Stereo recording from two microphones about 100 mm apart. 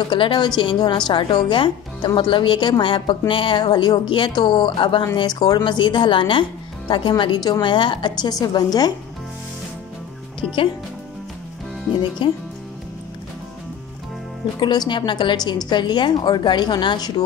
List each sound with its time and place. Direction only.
0.1 s a woman's voice: 50° left (ahead or behind)
12.2 s a woman's voice: 55° left (ahead or behind)
14.6 s a woman's voice: 45° left (ahead or behind)